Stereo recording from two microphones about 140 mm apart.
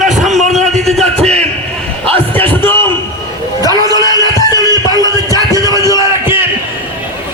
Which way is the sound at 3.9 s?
25° left (ahead or behind).